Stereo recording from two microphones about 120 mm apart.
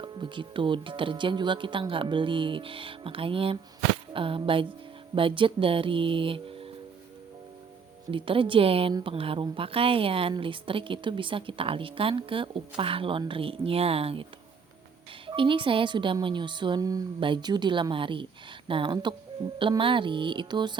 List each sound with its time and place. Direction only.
0.0 s a woman's voice: 45° right (ahead or behind)
8.1 s a woman's voice: 45° right (ahead or behind)
15.3 s a woman's voice: 45° right (ahead or behind)